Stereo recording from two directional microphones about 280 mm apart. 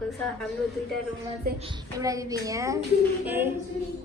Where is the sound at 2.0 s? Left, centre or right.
Centre.